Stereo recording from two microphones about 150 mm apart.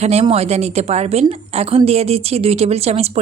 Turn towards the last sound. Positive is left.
turn(degrees=-45)  # may be behind; listen again after turning